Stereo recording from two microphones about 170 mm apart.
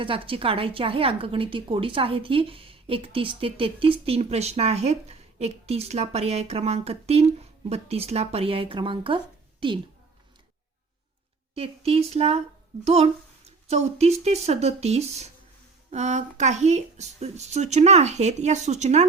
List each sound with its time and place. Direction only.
0.0 s a woman's voice: 30° right (ahead or behind)
11.5 s a woman's voice: 35° right (ahead or behind)